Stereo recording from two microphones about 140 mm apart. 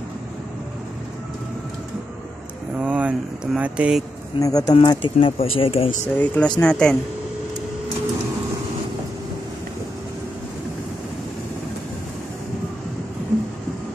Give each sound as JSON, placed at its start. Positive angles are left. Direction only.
{"t": 2.8, "sound": "a sound", "side_deg": -10}
{"t": 4.4, "sound": "speech", "side_deg": 25}
{"t": 4.7, "sound": "speech", "side_deg": 40}
{"t": 6.1, "sound": "speech", "side_deg": 10}